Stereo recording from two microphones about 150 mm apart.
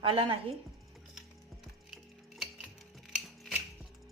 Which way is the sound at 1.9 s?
Centre (ahead or behind).